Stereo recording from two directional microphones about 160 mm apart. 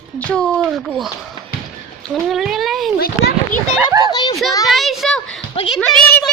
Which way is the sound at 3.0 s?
70° left (ahead or behind).